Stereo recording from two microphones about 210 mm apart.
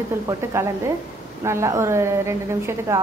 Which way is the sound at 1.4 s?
15° right (ahead or behind).